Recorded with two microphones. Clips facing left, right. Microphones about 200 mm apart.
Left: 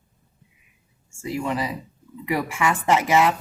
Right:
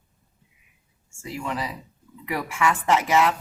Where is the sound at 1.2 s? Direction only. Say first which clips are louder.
Left 4 dB; 10° left (ahead or behind).